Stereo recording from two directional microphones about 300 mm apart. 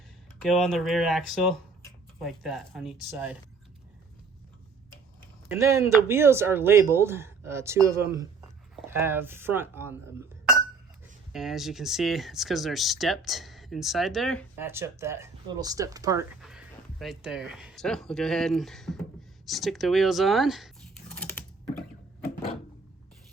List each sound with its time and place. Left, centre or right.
0.3 s speech: centre
5.5 s speech: centre
11.3 s speech: centre
21.1 s typing: centre